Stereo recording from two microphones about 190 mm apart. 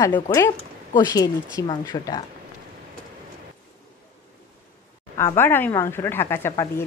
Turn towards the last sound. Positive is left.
turn(degrees=15)  # may be behind; listen again after turning